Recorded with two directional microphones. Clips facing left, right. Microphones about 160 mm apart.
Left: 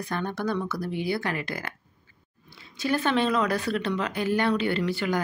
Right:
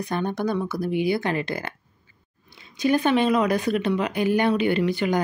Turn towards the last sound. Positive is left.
turn(degrees=-15)  # may be behind; listen again after turning